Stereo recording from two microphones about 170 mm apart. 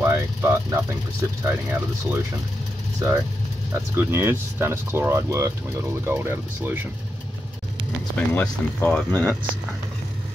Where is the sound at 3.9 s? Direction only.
15° right (ahead or behind).